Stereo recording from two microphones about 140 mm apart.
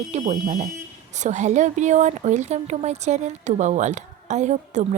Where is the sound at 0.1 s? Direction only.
65° right (ahead or behind).